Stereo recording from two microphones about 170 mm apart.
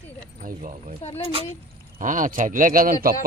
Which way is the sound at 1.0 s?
40° left (ahead or behind).